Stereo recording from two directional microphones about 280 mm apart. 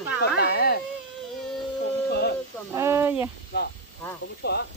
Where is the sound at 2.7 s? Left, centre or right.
Centre.